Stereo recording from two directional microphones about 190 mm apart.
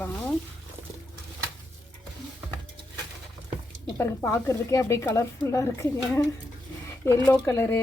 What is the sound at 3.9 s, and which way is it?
A woman's voice, 15° left (ahead or behind).